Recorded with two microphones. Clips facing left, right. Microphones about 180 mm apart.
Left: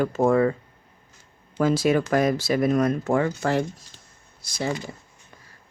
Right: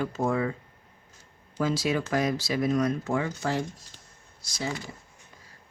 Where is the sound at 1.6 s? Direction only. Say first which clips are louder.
Left 6 dB; 55° left (ahead or behind).